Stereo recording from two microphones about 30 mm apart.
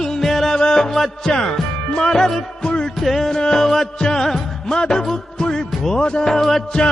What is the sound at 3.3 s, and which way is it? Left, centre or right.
Music, left.